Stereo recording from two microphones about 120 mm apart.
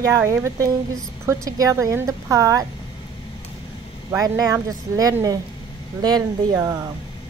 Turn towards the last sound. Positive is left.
turn(degrees=-30)  # may be behind; listen again after turning